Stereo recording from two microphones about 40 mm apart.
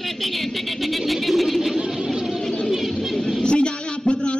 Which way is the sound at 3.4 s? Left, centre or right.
Left.